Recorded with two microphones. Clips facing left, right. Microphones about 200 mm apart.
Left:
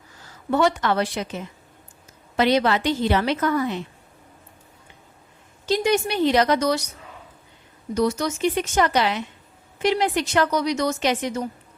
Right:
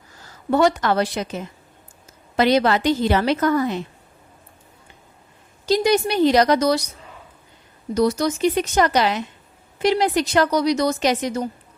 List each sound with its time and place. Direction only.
0.5 s a woman's voice: 40° right (ahead or behind)
5.6 s a woman's voice: 35° right (ahead or behind)
7.9 s a woman's voice: 35° right (ahead or behind)